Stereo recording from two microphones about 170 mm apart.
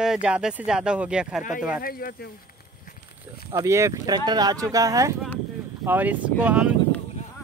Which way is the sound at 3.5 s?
15° right (ahead or behind).